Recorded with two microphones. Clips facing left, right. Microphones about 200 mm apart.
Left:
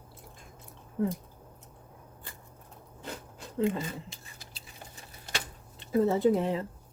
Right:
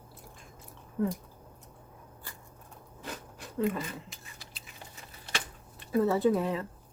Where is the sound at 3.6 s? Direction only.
25° left (ahead or behind).